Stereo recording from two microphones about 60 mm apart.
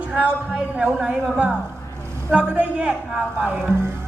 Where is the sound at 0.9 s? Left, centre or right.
Centre.